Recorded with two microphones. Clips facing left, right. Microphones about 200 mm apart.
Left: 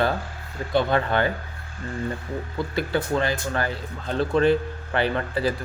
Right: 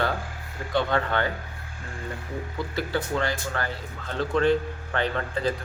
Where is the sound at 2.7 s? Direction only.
20° left (ahead or behind).